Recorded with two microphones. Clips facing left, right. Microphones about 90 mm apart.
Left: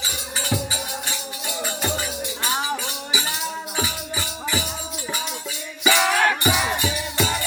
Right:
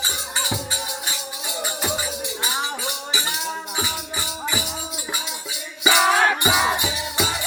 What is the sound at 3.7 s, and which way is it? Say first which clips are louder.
Music: left 1 dB; 5° right (ahead or behind).